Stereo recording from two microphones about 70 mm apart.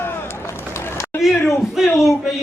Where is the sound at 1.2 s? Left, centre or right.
Centre.